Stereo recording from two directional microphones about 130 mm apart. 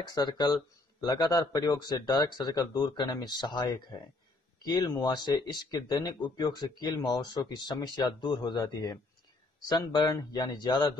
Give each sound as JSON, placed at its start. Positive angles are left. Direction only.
{"t": 0.0, "sound": "speech", "side_deg": 30}